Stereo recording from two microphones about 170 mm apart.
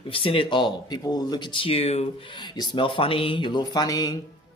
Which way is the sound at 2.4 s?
25° left (ahead or behind).